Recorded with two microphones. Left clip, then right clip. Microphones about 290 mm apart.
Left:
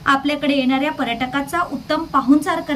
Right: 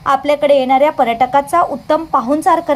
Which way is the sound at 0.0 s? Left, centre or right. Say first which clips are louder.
Right 5 dB; centre.